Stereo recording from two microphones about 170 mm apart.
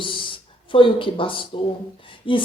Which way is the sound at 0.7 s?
30° left (ahead or behind).